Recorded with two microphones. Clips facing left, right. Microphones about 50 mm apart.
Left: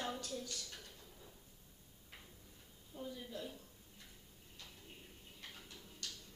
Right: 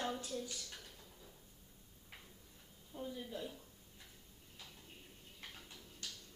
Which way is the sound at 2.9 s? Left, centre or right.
Centre.